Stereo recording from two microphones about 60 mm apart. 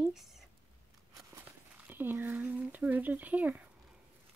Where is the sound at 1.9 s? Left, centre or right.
Right.